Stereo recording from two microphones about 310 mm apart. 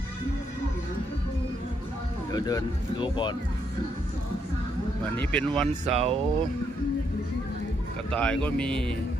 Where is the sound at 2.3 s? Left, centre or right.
Centre.